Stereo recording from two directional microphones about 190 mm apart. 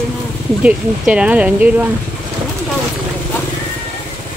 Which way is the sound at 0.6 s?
5° right (ahead or behind).